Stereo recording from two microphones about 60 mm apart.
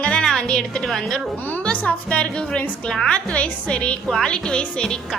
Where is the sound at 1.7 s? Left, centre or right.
Left.